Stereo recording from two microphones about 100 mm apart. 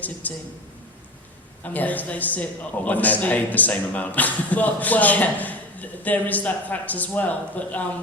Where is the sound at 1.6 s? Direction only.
15° left (ahead or behind).